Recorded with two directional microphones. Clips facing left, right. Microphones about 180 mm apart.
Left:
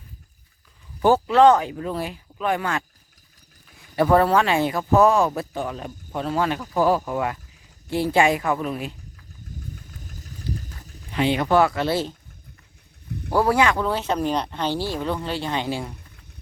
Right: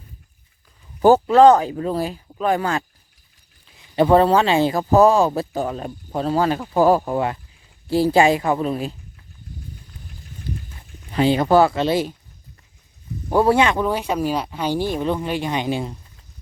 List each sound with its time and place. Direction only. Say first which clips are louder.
1.0 s speech: right 4 dB; 40° right (ahead or behind)
3.8 s speech: right 3 dB; 25° right (ahead or behind)
9.5 s a sound: left 1 dB; 45° left (ahead or behind)
11.1 s speech: right 4 dB; 35° right (ahead or behind); by 12.1 s 15° right (ahead or behind)
13.3 s speech: right 3 dB; 25° right (ahead or behind)